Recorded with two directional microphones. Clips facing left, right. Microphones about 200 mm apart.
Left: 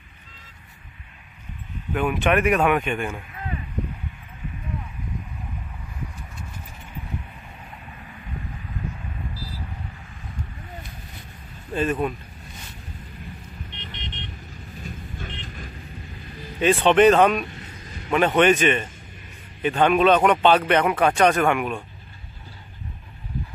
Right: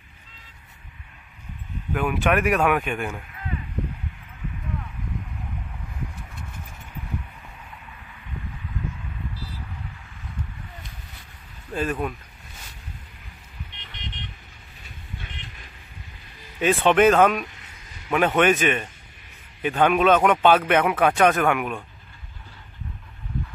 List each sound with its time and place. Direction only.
2.0 s speech: centre (ahead or behind)
11.7 s speech: centre (ahead or behind)
14.8 s vehicle: 40° left (ahead or behind)
16.5 s speech: 5° right (ahead or behind)